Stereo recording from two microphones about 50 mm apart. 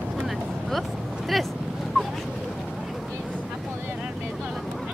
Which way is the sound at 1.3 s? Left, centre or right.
Centre.